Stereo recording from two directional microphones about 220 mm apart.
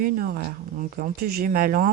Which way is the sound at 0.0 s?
40° right (ahead or behind).